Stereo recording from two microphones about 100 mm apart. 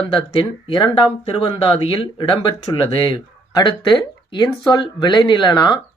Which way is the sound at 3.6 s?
50° left (ahead or behind).